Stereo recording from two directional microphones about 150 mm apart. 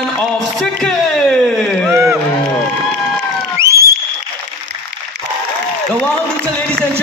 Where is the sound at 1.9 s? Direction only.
15° right (ahead or behind).